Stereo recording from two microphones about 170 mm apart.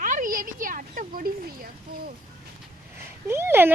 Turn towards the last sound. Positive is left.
turn(degrees=-15)  # may be behind; listen again after turning